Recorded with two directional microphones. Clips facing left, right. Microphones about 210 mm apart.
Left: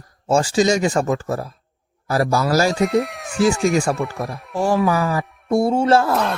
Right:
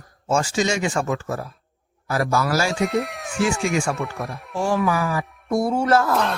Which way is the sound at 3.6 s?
40° left (ahead or behind).